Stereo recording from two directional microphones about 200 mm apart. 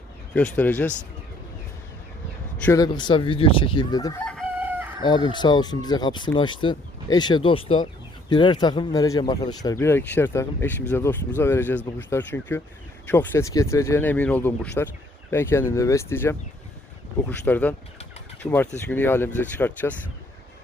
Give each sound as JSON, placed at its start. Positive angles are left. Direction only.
{"t": 0.3, "sound": "speech", "side_deg": 5}
{"t": 2.6, "sound": "speech", "side_deg": 15}
{"t": 4.4, "sound": "chicken", "side_deg": -10}
{"t": 5.0, "sound": "speech", "side_deg": 25}
{"t": 18.9, "sound": "speech", "side_deg": 10}